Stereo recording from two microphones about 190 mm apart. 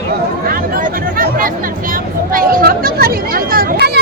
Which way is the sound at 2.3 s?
50° right (ahead or behind).